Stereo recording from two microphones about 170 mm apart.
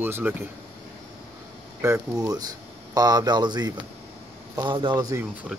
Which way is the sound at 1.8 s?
20° right (ahead or behind).